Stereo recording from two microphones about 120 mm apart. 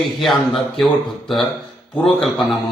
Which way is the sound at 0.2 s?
Centre (ahead or behind).